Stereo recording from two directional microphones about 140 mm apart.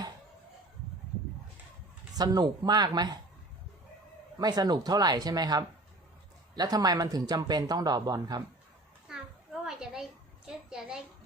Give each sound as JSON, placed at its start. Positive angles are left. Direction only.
{"t": 2.1, "sound": "speech", "side_deg": -30}
{"t": 4.4, "sound": "speech", "side_deg": -30}
{"t": 9.1, "sound": "a sound", "side_deg": -5}